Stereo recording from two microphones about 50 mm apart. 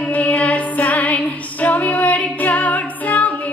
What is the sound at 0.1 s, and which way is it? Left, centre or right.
Music, left.